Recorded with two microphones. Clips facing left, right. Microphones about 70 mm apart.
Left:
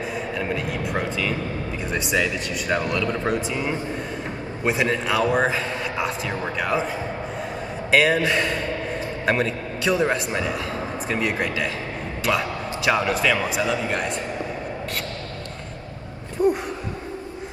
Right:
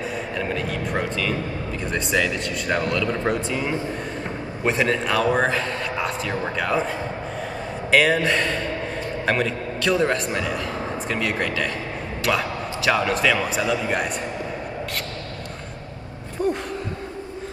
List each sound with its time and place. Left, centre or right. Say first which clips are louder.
0.4 s a man's voice: right 1 dB; centre
7.9 s a man's voice: even; centre
12.3 s a sound: even; centre
13.0 s a man's voice: right 1 dB; centre
16.4 s gasp: left 4 dB; centre